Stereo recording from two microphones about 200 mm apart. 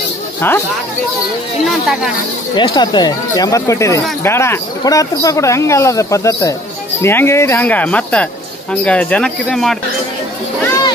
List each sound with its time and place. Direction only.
0.4 s speech: 10° left (ahead or behind)
2.5 s speech: 20° left (ahead or behind); by 9.8 s centre (ahead or behind)